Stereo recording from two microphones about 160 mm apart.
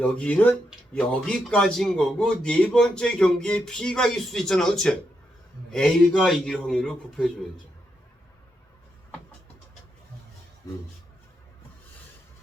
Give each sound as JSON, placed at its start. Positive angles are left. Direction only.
{"t": 0.0, "sound": "a man's voice", "side_deg": 10}
{"t": 10.6, "sound": "speech", "side_deg": 25}